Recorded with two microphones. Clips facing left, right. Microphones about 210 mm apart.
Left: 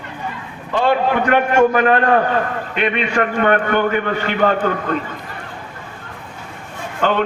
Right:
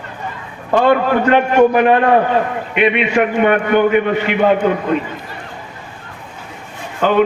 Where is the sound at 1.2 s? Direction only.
20° right (ahead or behind).